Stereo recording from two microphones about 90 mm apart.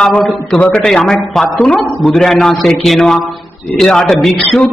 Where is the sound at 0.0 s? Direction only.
5° left (ahead or behind).